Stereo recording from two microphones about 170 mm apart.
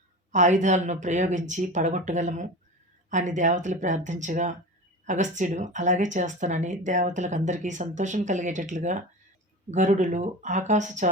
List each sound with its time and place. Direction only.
0.3 s speech: 45° right (ahead or behind)